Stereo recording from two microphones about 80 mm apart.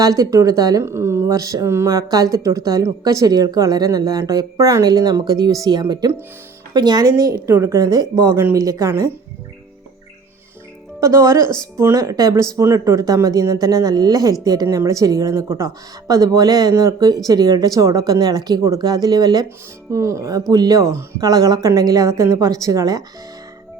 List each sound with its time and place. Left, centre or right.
0.0 s speech: right
0.8 s speech: right
2.0 s speech: right
8.1 s speech: right
11.0 s speech: right
19.9 s speech: right